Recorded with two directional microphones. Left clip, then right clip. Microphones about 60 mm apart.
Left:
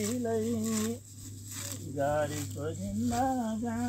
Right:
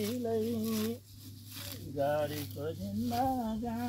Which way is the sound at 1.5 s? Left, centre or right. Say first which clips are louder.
Left 2 dB; centre.